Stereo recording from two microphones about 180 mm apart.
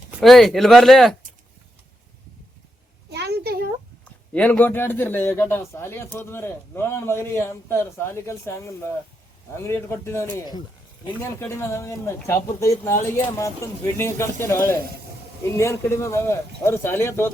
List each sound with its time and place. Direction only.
0.2 s speech: centre (ahead or behind)
3.1 s a sound: 65° right (ahead or behind)
4.0 s a man's voice: 10° left (ahead or behind)